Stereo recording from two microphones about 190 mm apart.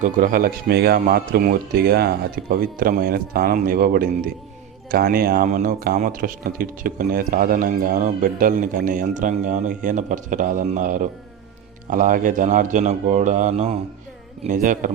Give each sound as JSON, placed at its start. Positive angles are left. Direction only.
{"t": 0.0, "sound": "speech", "side_deg": -45}